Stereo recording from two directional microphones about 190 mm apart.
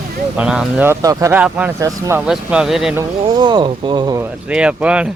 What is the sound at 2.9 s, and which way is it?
Speech, 20° right (ahead or behind).